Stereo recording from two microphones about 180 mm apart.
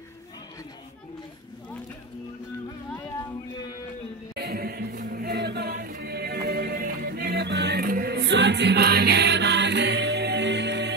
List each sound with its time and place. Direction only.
4.4 s choir: 60° right (ahead or behind)